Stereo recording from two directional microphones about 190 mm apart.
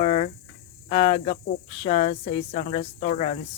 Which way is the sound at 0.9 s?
30° left (ahead or behind).